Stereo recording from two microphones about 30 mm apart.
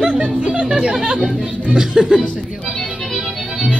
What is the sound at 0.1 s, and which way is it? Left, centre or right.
Music, right.